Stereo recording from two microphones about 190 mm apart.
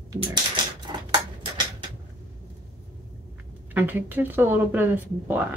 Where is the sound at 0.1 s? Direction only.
25° right (ahead or behind).